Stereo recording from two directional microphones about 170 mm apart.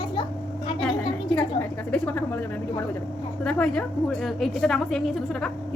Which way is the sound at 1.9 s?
10° left (ahead or behind).